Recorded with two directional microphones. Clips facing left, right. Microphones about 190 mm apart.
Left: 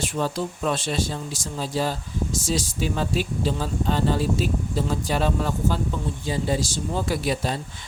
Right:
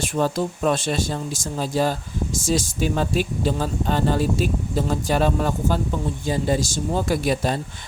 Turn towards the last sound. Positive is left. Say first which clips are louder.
# right 3 dB
turn(degrees=-50)  # may be behind; listen again after turning